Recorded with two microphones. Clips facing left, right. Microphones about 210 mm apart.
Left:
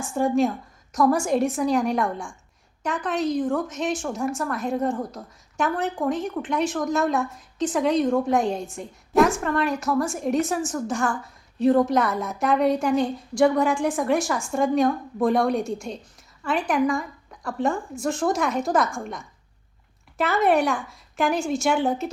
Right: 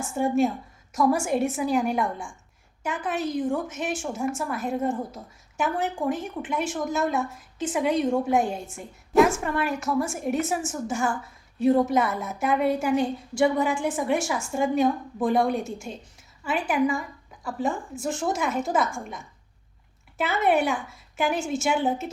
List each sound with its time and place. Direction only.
0.1 s a woman's voice: 5° right (ahead or behind)
20.1 s a woman's voice: 5° right (ahead or behind)